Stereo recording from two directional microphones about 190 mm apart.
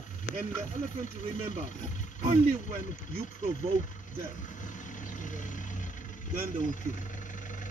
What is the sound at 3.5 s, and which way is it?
Vehicle, 40° left (ahead or behind).